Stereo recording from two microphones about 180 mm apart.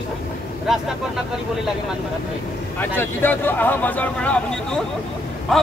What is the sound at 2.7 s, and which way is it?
Speech, 10° left (ahead or behind).